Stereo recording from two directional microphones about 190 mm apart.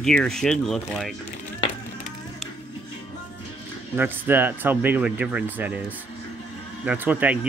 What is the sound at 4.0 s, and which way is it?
Speech, 10° right (ahead or behind).